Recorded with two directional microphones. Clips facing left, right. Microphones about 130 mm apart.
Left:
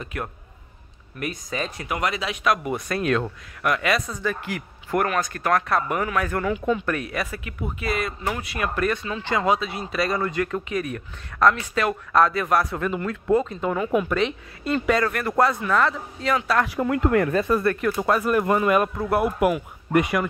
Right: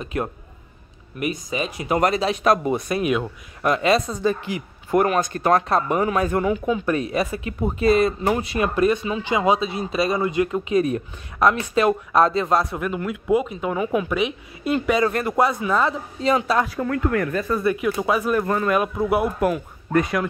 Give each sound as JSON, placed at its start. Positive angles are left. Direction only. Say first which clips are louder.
{"t": 0.0, "sound": "speech", "louder": "right 6 dB", "side_deg": -25}
{"t": 1.2, "sound": "a woman's voice", "louder": "right 4 dB", "side_deg": -10}
{"t": 2.0, "sound": "speech", "louder": "right 7 dB", "side_deg": -40}
{"t": 2.7, "sound": "a woman's voice", "louder": "right 2 dB", "side_deg": -15}
{"t": 3.6, "sound": "speech", "louder": "right 4 dB", "side_deg": -25}
{"t": 12.8, "sound": "a woman's voice", "louder": "even", "side_deg": -5}
{"t": 15.0, "sound": "speech", "louder": "right 3 dB", "side_deg": -25}
{"t": 15.3, "sound": "a woman's voice", "louder": "left 3 dB", "side_deg": -15}
{"t": 16.7, "sound": "speech", "louder": "left 2 dB", "side_deg": 20}
{"t": 17.6, "sound": "speech", "louder": "right 1 dB", "side_deg": -5}
{"t": 18.4, "sound": "speech", "louder": "left 1 dB", "side_deg": 10}
{"t": 18.8, "sound": "speech", "louder": "right 1 dB", "side_deg": -5}